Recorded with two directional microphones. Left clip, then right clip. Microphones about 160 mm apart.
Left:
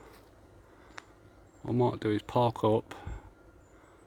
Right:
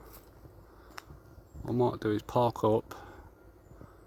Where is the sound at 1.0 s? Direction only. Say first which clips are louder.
Right 1 dB; 20° right (ahead or behind).